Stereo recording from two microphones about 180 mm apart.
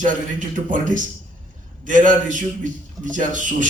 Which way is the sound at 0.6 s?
45° right (ahead or behind).